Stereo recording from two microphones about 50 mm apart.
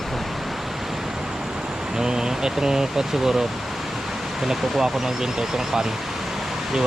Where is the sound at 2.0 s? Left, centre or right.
Centre.